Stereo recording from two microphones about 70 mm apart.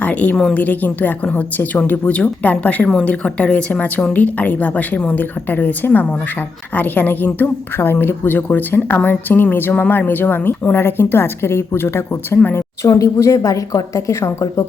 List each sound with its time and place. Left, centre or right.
0.0 s a woman's voice: left
12.8 s speech: left